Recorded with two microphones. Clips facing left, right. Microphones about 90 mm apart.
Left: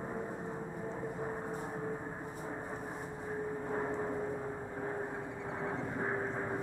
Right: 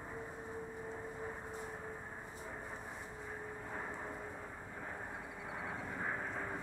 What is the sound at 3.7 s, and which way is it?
Vehicle, 25° left (ahead or behind).